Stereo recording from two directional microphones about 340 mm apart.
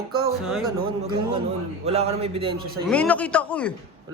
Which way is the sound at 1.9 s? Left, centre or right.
Centre.